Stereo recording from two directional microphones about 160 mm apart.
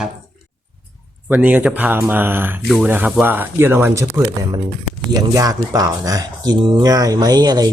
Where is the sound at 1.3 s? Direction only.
10° right (ahead or behind).